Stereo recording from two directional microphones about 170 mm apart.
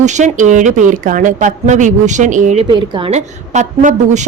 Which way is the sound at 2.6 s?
30° right (ahead or behind).